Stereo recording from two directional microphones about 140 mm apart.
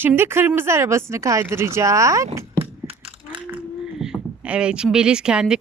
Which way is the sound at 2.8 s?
45° right (ahead or behind).